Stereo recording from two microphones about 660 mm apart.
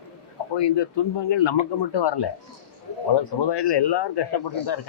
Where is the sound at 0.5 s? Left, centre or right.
Left.